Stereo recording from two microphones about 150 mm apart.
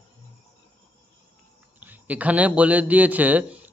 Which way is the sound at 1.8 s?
10° right (ahead or behind).